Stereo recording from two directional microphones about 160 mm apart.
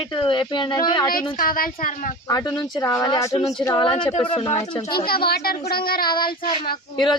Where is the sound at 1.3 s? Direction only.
65° left (ahead or behind).